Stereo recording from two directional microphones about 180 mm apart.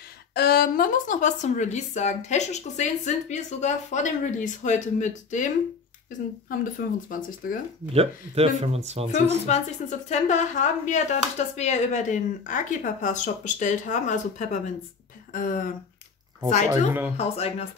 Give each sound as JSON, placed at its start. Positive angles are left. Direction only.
{"t": 0.3, "sound": "speech", "side_deg": 60}
{"t": 6.6, "sound": "speech", "side_deg": 50}
{"t": 7.9, "sound": "speech", "side_deg": -35}
{"t": 9.5, "sound": "speech", "side_deg": 40}
{"t": 16.7, "sound": "speech", "side_deg": -10}
{"t": 17.2, "sound": "speech", "side_deg": 35}